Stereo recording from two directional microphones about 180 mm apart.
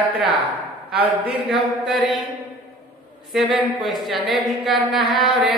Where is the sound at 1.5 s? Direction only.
Centre (ahead or behind).